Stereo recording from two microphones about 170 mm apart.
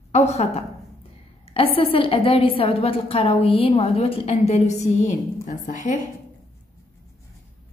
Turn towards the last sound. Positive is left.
turn(degrees=50)  # may be behind; listen again after turning